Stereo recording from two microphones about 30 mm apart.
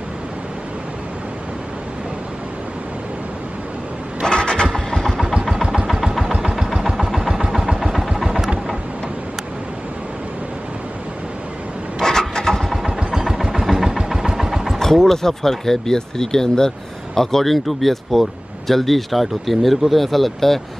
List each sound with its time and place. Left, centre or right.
4.3 s vehicle: left
5.2 s vehicle: centre
7.2 s vehicle: centre
12.0 s rub: centre
12.7 s vehicle: centre
14.8 s speech: centre